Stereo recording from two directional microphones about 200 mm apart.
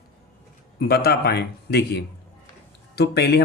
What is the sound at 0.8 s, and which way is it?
Speech, 50° left (ahead or behind).